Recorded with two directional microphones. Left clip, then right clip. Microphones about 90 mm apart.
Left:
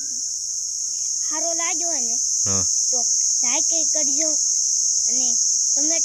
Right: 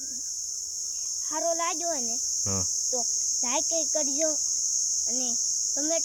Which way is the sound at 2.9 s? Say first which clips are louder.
Left 7 dB; 45° right (ahead or behind).